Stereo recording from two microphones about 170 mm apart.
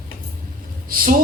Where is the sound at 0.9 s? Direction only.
55° right (ahead or behind).